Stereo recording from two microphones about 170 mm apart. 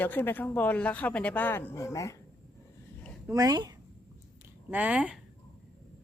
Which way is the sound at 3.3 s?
20° right (ahead or behind).